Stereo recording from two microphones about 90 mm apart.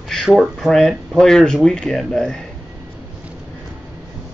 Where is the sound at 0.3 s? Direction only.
Centre (ahead or behind).